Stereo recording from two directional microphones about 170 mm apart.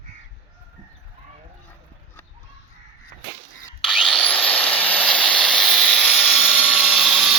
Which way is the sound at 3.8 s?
Centre (ahead or behind).